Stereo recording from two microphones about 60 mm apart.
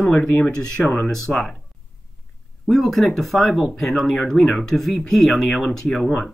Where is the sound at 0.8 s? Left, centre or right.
Centre.